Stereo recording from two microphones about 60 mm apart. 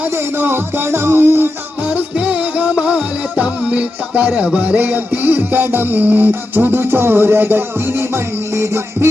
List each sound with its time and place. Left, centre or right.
0.3 s music: right
1.9 s music: right